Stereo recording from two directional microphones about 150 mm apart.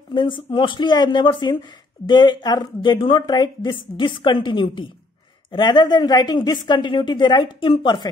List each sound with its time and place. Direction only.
0.1 s a woman's voice: 30° left (ahead or behind)